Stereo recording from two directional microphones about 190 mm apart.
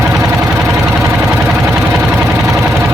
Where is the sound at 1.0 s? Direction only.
10° right (ahead or behind).